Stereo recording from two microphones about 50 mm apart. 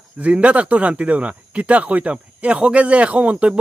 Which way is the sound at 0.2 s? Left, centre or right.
Right.